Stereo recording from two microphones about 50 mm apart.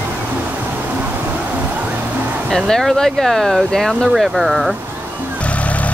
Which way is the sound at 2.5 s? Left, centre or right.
Centre.